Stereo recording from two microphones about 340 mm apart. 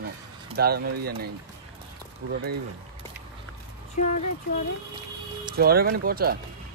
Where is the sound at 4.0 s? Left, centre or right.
Left.